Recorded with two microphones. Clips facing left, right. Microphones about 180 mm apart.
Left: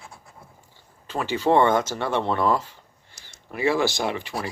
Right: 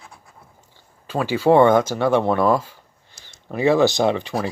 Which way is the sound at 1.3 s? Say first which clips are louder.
Right 5 dB; 10° right (ahead or behind).